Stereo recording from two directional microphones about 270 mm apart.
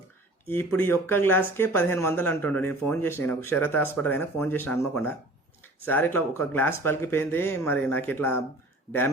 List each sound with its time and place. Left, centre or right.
0.4 s speech: centre